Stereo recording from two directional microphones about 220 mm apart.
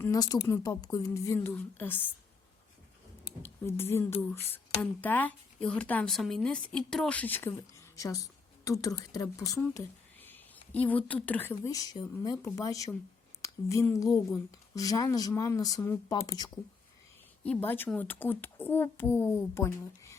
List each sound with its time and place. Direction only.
0.0 s speech: 15° left (ahead or behind)
3.4 s speech: 10° left (ahead or behind)